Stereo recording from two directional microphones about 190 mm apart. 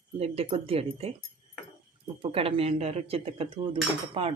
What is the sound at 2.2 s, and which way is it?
Speech, 30° right (ahead or behind).